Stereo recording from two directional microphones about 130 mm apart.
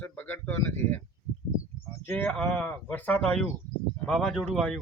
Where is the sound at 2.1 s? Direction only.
15° left (ahead or behind).